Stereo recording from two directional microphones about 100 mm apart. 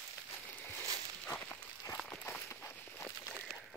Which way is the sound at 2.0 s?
25° left (ahead or behind).